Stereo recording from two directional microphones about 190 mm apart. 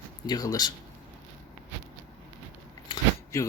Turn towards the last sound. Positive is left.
turn(degrees=15)  # may be behind; listen again after turning